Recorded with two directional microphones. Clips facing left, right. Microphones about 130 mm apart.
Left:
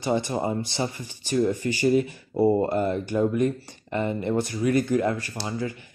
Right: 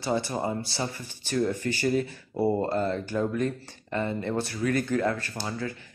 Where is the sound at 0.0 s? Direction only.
20° left (ahead or behind).